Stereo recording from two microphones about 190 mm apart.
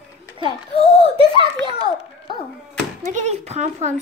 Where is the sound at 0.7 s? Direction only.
30° left (ahead or behind).